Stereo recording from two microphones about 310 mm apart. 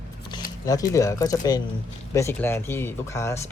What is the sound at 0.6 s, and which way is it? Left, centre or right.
Speech, centre.